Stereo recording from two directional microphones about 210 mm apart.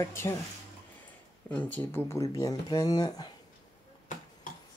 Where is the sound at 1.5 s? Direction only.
5° left (ahead or behind).